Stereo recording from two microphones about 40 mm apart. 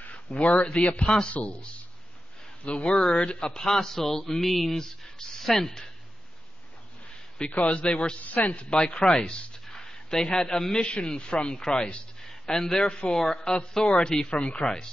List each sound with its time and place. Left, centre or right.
0.1 s a man's voice: left; by 5.9 s centre
7.3 s speech: left
8.2 s a man's voice: left
8.6 s a man's voice: left